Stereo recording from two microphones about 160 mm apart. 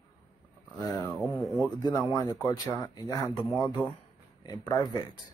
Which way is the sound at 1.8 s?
20° left (ahead or behind).